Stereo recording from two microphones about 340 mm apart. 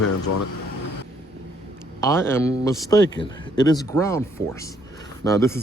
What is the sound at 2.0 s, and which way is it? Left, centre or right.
A man's voice, centre.